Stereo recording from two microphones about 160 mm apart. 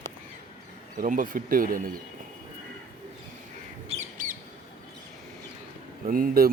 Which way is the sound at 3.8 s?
50° right (ahead or behind).